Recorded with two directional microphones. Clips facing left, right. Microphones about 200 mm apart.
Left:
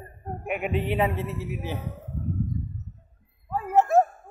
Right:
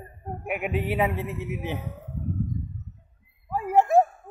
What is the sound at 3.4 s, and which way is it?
Dog, 15° right (ahead or behind).